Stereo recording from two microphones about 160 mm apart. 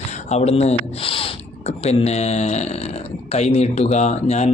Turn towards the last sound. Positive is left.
turn(degrees=45)  # may be behind; listen again after turning